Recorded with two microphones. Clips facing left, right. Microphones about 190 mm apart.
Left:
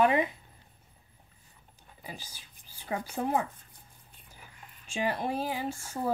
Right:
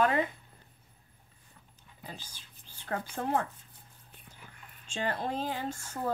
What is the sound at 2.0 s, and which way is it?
Speech, 10° left (ahead or behind).